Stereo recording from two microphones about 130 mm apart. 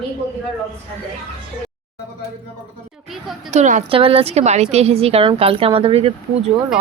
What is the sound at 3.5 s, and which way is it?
Speech, 65° right (ahead or behind).